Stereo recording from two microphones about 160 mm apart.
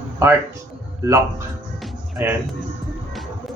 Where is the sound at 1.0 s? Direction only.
20° right (ahead or behind).